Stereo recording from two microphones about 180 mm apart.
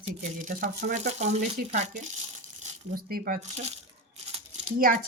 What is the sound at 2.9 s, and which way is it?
Speech, 55° right (ahead or behind).